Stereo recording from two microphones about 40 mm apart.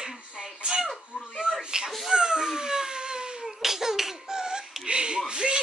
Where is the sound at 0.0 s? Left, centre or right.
Centre.